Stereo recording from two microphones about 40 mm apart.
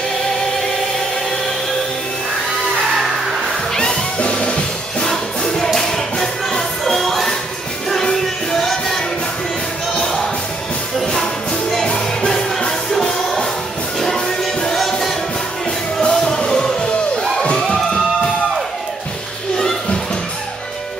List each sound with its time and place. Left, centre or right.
3.7 s music: centre
5.1 s music: centre
11.9 s music: centre